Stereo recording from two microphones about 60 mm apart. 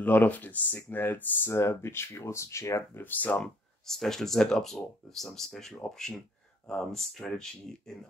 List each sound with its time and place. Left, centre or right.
0.0 s speech: left
1.5 s speech: left
3.0 s speech: left
3.8 s speech: centre